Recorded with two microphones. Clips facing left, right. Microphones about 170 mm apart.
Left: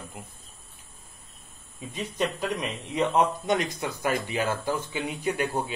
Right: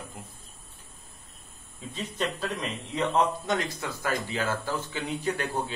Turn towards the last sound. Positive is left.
turn(degrees=15)  # may be behind; listen again after turning